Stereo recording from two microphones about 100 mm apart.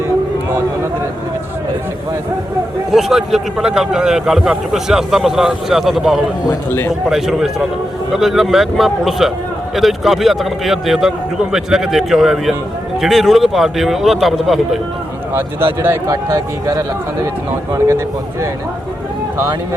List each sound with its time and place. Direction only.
2.9 s a man's voice: 5° right (ahead or behind)
6.7 s a man's voice: 25° left (ahead or behind)
7.1 s a man's voice: 5° right (ahead or behind)
15.4 s speech: 20° right (ahead or behind)
17.7 s speech: 30° right (ahead or behind)